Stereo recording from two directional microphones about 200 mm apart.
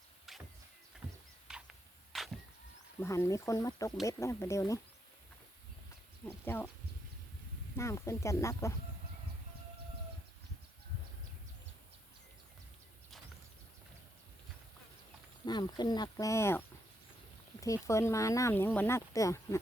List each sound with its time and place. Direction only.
0.3 s music: centre (ahead or behind)
1.5 s a sound: 5° right (ahead or behind)
3.0 s speech: 15° left (ahead or behind)
6.2 s speech: 10° left (ahead or behind)
7.8 s speech: 15° left (ahead or behind)
15.4 s speech: 20° left (ahead or behind)